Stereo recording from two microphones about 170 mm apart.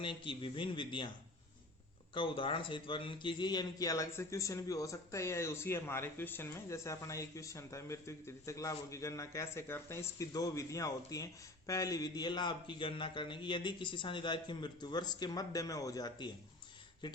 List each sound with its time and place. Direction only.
0.0 s a man's voice: 30° left (ahead or behind)
2.1 s a man's voice: 30° left (ahead or behind)